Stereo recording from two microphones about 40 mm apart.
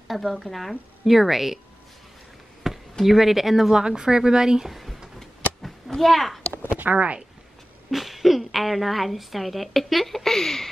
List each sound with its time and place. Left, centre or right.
0.1 s a woman's voice: centre
2.6 s speech: centre
5.9 s a woman's voice: centre
6.8 s speech: right
7.9 s a woman's voice: centre